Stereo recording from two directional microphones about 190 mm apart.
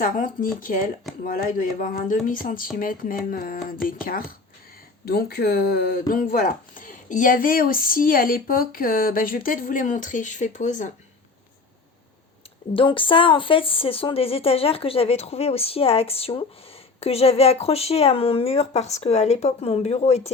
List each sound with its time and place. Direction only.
0.0 s speech: 45° left (ahead or behind)
12.7 s speech: 25° left (ahead or behind)